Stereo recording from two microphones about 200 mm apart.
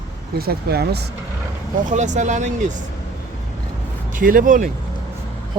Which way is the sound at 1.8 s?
35° right (ahead or behind).